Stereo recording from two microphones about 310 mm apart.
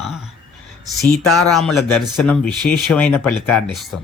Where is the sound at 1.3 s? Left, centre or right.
Centre.